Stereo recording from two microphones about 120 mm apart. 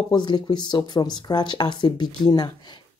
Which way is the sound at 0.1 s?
40° left (ahead or behind).